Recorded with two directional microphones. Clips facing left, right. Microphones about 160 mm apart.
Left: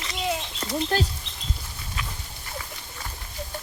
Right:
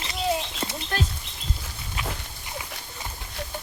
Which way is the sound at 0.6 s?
30° right (ahead or behind).